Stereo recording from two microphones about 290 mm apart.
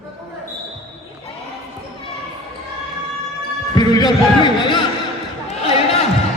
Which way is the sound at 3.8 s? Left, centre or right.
Centre.